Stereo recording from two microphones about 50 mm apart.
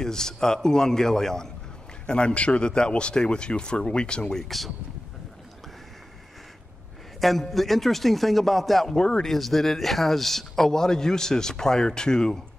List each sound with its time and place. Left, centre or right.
0.0 s a man's voice: centre
7.2 s speech: centre